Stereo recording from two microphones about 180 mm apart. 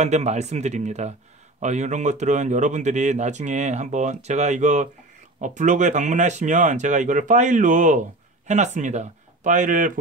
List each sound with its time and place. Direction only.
0.0 s speech: 40° right (ahead or behind)